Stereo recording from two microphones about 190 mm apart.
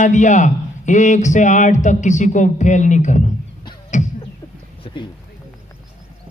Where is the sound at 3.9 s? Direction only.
40° left (ahead or behind).